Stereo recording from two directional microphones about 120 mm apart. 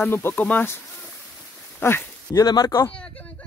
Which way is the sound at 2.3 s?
35° left (ahead or behind).